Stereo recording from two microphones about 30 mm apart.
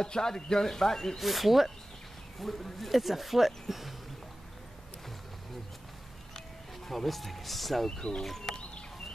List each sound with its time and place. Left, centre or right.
0.0 s speech: left
1.1 s speech: centre
2.3 s speech: centre
6.9 s speech: centre